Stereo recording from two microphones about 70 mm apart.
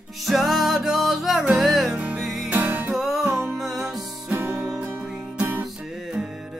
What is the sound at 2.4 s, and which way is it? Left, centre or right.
Music, right.